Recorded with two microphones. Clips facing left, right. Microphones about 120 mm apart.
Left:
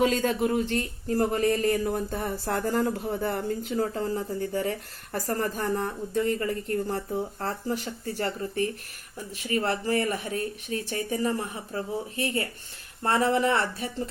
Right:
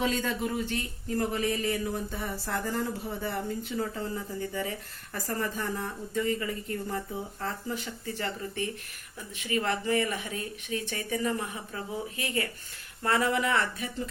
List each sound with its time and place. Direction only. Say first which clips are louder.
0.0 s speech: left 6 dB; 45° left (ahead or behind)
6.1 s speech: left 3 dB; 50° left (ahead or behind); by 13.9 s 35° left (ahead or behind)